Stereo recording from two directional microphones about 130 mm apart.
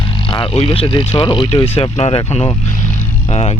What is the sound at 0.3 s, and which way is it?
Speech, 40° left (ahead or behind).